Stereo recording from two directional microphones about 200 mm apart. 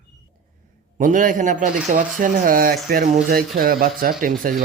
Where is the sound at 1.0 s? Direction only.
40° right (ahead or behind).